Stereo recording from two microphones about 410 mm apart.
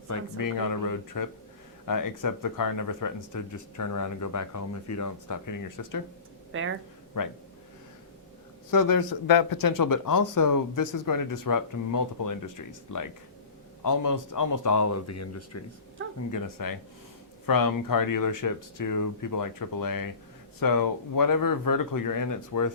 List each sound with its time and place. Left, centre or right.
0.1 s speech: left
6.5 s speech: right
7.1 s speech: left
8.7 s speech: left
16.3 s speech: left